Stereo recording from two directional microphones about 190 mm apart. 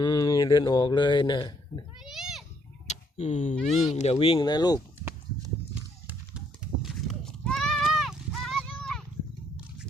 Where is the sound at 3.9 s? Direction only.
35° left (ahead or behind).